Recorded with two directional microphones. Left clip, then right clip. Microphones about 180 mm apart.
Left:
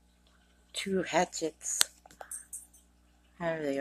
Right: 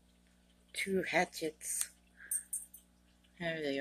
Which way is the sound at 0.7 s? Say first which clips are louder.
Left 2 dB; 20° right (ahead or behind).